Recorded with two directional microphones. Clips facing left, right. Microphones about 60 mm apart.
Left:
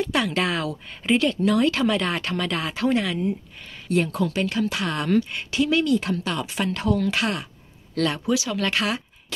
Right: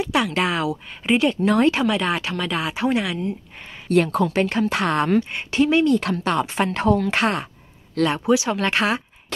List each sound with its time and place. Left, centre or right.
0.0 s speech: centre
1.4 s speech: right
1.9 s speech: centre
2.7 s speech: centre
3.9 s speech: right
4.2 s speech: right
5.3 s speech: right
6.1 s speech: right
8.1 s speech: right